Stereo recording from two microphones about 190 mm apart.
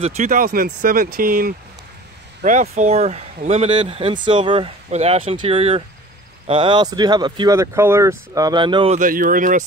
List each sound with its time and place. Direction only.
0.0 s speech: 35° right (ahead or behind)
8.9 s speech: 45° right (ahead or behind)